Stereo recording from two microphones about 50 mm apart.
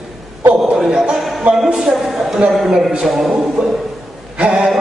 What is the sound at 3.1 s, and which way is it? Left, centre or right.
Music, centre.